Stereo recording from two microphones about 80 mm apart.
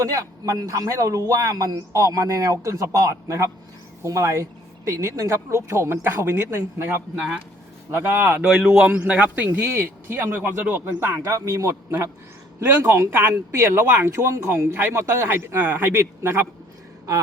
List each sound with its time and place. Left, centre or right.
0.0 s a man's voice: right
8.4 s a man's voice: centre; by 11.2 s right
11.2 s speech: right